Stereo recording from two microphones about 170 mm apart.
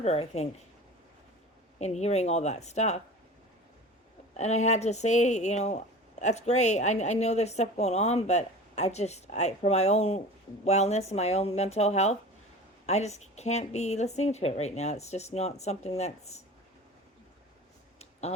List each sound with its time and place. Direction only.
0.0 s speech: 40° left (ahead or behind)
1.8 s speech: 40° left (ahead or behind)
4.4 s speech: 40° left (ahead or behind)
18.0 s a sound: 40° left (ahead or behind)